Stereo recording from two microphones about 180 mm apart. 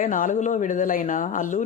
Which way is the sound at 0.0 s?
45° left (ahead or behind).